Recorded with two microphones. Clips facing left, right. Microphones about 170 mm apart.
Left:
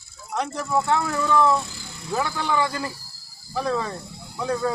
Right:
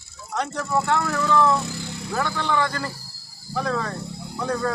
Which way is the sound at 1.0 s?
15° left (ahead or behind).